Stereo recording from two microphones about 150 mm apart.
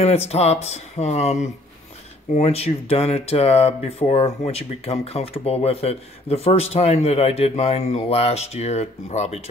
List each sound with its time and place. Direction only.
0.0 s speech: 45° left (ahead or behind)